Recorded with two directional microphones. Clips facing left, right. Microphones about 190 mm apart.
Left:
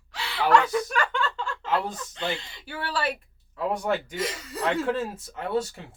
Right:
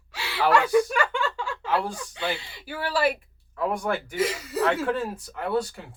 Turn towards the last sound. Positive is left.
turn(degrees=25)  # may be behind; listen again after turning